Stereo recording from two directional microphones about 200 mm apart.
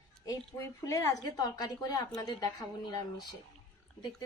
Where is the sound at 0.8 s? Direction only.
15° left (ahead or behind).